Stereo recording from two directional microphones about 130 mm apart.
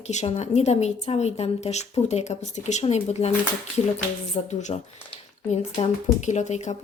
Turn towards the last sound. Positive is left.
turn(degrees=60)  # may be behind; listen again after turning